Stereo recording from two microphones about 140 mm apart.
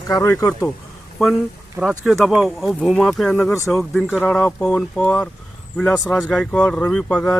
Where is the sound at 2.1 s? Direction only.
Centre (ahead or behind).